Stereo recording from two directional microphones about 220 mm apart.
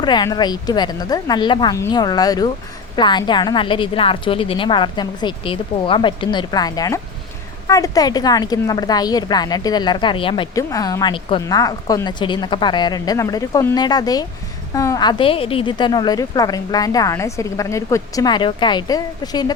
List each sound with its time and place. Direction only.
0.0 s a woman's voice: 20° left (ahead or behind)